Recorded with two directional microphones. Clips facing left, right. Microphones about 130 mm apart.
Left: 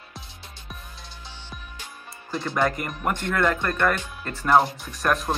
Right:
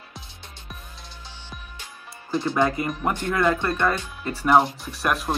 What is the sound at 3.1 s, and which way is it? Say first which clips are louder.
Speech: right 1 dB; 10° right (ahead or behind).